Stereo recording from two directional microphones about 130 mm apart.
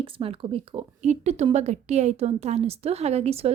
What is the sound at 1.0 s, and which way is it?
A woman's voice, 60° right (ahead or behind).